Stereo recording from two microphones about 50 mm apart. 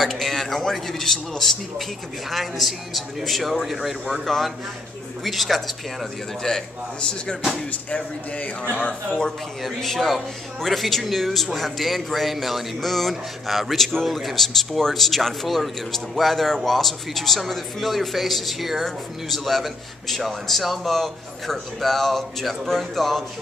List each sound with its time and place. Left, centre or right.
0.0 s speech: centre
6.4 s a man's voice: centre
8.7 s speech: left
9.2 s speech: centre